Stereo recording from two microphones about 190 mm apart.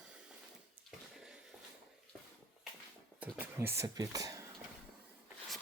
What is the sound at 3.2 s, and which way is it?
Speech, 10° right (ahead or behind).